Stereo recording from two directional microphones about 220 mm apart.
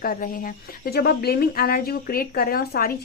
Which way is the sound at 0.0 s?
40° left (ahead or behind).